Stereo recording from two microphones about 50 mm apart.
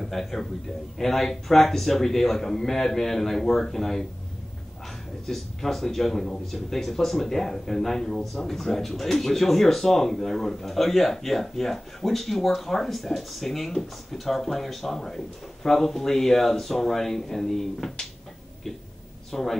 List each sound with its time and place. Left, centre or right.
0.0 s a man's voice: centre
5.2 s a man's voice: centre
19.3 s a man's voice: centre